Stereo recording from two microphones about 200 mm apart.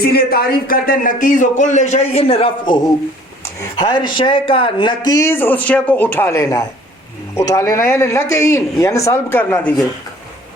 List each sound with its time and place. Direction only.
0.0 s speech: 50° left (ahead or behind); by 2.7 s 30° left (ahead or behind)
3.9 s speech: 25° left (ahead or behind)
5.3 s speech: 10° left (ahead or behind)